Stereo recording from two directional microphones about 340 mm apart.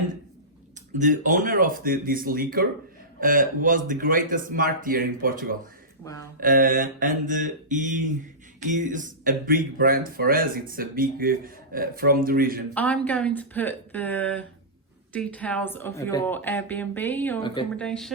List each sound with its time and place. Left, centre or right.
0.9 s speech: right
6.0 s speech: centre
6.4 s speech: right
12.7 s speech: centre
17.8 s speech: centre